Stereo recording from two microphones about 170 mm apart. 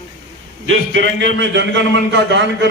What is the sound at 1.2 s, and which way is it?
A man's voice, 90° right.